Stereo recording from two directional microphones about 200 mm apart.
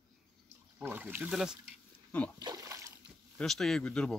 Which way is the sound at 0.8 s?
10° right (ahead or behind).